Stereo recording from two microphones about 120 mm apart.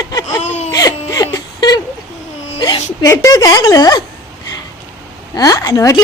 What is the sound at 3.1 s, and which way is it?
Speech, 30° left (ahead or behind).